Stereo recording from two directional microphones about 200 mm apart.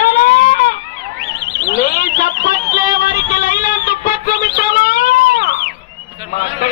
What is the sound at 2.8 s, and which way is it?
Music, 45° left (ahead or behind).